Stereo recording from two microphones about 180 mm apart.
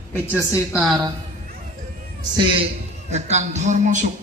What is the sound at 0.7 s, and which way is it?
Speech, 5° right (ahead or behind).